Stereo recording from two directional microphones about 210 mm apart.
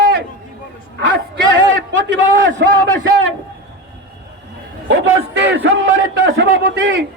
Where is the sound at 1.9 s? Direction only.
60° right (ahead or behind).